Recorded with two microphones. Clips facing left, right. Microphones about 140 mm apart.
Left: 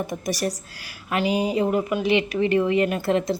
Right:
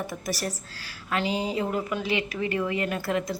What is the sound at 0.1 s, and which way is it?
A woman's voice, 15° left (ahead or behind).